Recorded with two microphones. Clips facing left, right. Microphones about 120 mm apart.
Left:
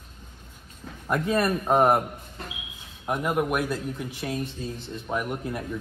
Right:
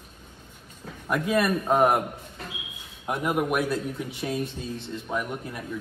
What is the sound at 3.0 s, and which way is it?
Speech, centre (ahead or behind).